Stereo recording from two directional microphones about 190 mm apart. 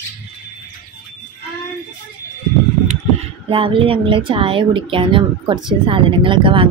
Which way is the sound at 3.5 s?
30° right (ahead or behind).